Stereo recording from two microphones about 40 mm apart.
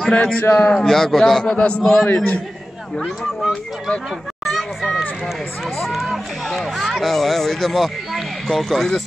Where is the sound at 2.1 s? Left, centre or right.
Left.